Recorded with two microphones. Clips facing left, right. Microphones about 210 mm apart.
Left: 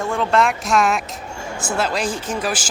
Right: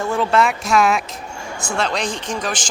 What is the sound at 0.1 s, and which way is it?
Speech, 5° right (ahead or behind).